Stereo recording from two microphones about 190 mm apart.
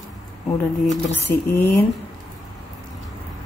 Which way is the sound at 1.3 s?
55° left (ahead or behind).